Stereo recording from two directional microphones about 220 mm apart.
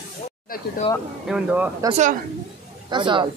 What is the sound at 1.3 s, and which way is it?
Speech, 5° right (ahead or behind).